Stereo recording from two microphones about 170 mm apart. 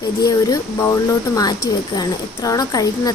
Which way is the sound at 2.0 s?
20° left (ahead or behind).